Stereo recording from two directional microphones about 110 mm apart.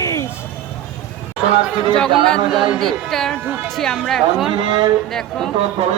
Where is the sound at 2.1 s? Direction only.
5° left (ahead or behind).